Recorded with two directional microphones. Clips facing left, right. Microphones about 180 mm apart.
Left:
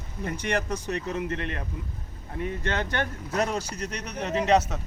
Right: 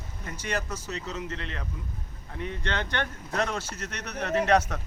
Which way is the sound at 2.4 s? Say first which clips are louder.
Left 3 dB; 45° left (ahead or behind).